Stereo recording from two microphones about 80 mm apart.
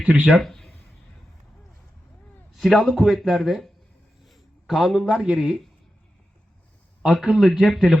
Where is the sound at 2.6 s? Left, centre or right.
Centre.